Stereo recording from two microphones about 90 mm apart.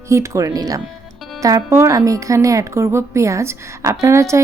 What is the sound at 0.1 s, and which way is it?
Speech, 35° right (ahead or behind).